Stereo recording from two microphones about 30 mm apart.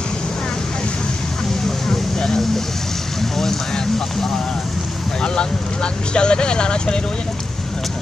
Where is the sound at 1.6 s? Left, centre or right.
Centre.